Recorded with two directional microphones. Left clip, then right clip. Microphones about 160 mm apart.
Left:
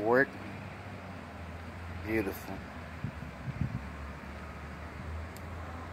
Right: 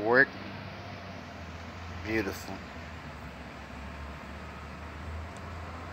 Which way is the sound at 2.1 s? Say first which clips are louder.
Right 1 dB; 5° left (ahead or behind).